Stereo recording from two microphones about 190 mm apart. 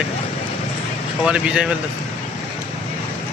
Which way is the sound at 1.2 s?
5° right (ahead or behind).